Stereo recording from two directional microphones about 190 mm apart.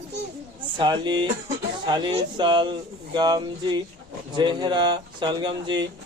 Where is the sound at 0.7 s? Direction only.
25° right (ahead or behind).